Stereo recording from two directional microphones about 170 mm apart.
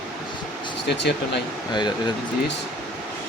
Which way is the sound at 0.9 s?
85° left.